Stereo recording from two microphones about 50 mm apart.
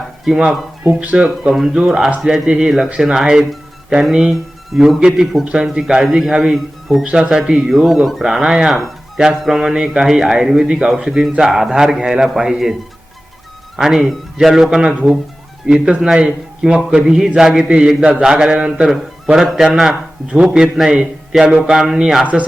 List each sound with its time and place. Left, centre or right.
1.1 s speech: centre
1.5 s a man's voice: centre
4.9 s a man's voice: centre
5.5 s a man's voice: centre
7.0 s a man's voice: centre
9.1 s music: centre
9.4 s a man's voice: centre
13.7 s a man's voice: centre